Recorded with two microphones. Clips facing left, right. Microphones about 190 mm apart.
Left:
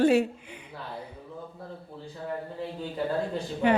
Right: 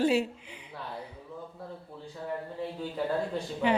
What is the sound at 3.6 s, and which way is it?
Speech, 50° left (ahead or behind).